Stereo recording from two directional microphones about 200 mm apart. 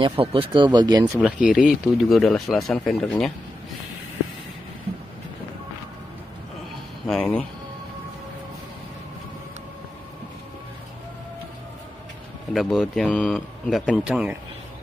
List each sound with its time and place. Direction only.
0.0 s speech: 25° right (ahead or behind); by 3.3 s centre (ahead or behind)
7.1 s speech: 5° left (ahead or behind)
12.5 s speech: centre (ahead or behind)